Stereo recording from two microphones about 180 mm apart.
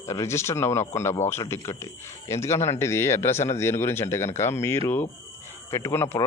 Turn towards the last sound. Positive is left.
turn(degrees=15)  # may be behind; listen again after turning